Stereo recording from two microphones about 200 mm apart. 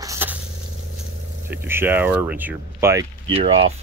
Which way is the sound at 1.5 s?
10° right (ahead or behind).